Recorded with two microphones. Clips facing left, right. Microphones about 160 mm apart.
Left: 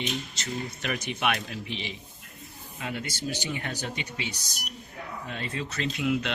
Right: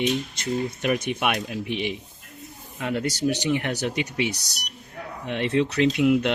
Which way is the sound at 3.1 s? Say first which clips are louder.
Right 10 dB; 75° right (ahead or behind).